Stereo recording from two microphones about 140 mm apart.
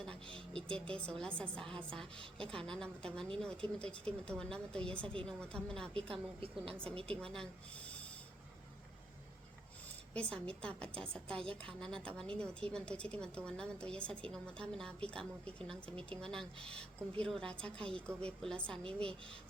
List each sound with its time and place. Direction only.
0.3 s a woman's voice: 5° left (ahead or behind)
6.0 s a woman's voice: 40° right (ahead or behind)
7.2 s speech: 5° left (ahead or behind)
10.2 s a woman's voice: 10° left (ahead or behind)
18.8 s speech: 40° right (ahead or behind)